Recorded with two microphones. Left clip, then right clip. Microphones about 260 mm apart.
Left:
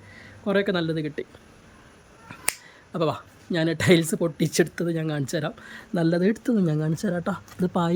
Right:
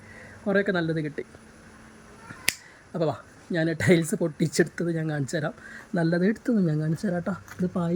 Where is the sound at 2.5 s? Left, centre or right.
Centre.